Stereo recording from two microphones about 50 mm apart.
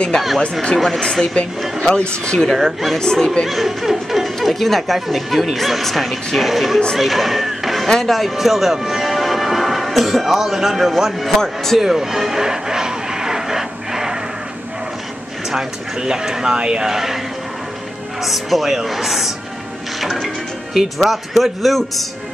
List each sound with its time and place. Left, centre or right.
0.7 s speech: centre
2.5 s speech: centre
3.0 s speech: centre
3.4 s speech: centre
7.0 s a sound: centre
7.9 s speech: centre
11.8 s music: centre
15.5 s speech: centre
18.2 s speech: centre
20.0 s music: centre
20.7 s speech: centre